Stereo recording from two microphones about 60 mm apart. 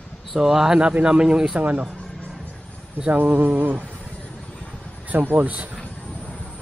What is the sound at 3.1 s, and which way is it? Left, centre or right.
Speech, right.